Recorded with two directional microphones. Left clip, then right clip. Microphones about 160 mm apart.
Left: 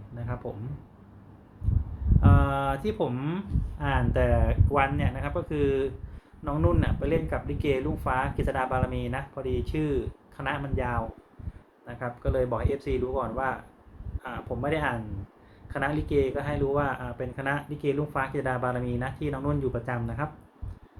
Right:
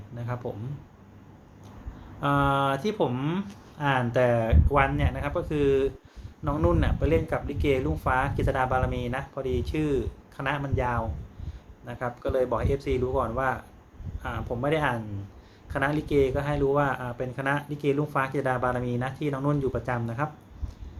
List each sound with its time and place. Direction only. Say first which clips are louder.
0.4 s speech: right 2 dB; 10° right (ahead or behind)
2.2 s speech: right 3 dB; 5° right (ahead or behind)